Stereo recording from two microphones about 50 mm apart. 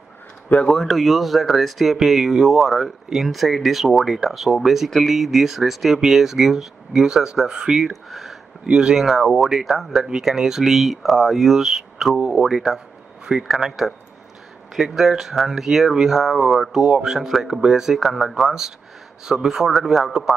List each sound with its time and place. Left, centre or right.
0.5 s speech: left
0.8 s speech: centre
8.6 s speech: centre
9.0 s speech: centre